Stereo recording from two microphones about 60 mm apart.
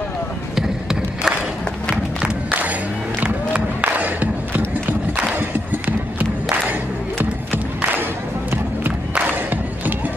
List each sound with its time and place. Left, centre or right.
0.6 s basketball bounce: centre
3.2 s crowd: right
5.4 s a sound: right
7.2 s crowd: right
9.3 s crowd: right